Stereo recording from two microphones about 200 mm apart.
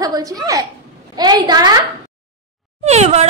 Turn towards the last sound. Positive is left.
turn(degrees=-35)  # may be behind; listen again after turning